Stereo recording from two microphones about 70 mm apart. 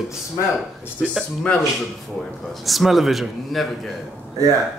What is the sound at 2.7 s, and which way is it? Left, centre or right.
Speech, centre.